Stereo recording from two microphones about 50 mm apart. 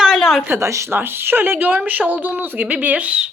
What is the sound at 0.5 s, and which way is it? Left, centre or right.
Speech, right.